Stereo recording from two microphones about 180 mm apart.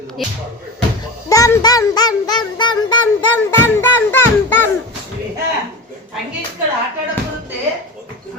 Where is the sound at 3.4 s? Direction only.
10° left (ahead or behind).